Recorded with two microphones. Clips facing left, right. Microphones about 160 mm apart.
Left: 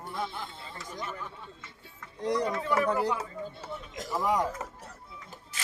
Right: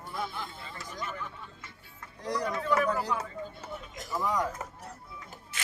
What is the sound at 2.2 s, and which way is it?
Speech, 25° left (ahead or behind).